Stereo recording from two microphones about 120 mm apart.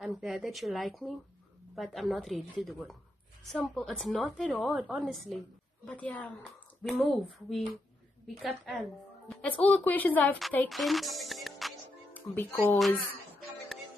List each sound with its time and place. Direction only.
0.0 s a woman's voice: centre (ahead or behind)
5.9 s a woman's voice: 10° left (ahead or behind)
9.3 s a woman's voice: 10° left (ahead or behind)
10.7 s speech: centre (ahead or behind)
12.1 s speech: 15° left (ahead or behind)